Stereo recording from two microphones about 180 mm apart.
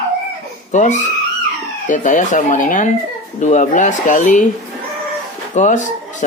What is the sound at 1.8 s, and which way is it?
Speech, 45° left (ahead or behind).